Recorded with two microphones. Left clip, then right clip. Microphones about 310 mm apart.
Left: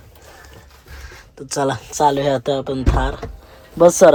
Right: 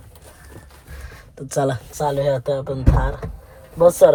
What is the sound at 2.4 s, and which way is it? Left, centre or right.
Music, centre.